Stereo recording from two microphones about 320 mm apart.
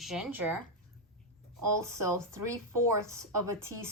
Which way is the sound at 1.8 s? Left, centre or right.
Centre.